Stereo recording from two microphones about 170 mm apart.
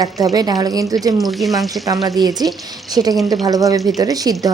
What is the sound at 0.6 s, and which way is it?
Speech, 20° right (ahead or behind).